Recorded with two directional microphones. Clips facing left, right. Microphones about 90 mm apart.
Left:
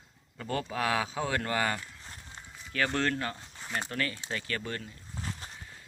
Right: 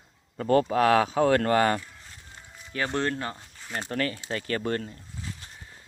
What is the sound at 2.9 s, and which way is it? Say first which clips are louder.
Speech: right 2 dB; 25° right (ahead or behind).